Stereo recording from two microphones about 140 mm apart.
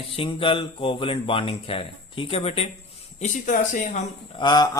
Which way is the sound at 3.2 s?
65° left (ahead or behind).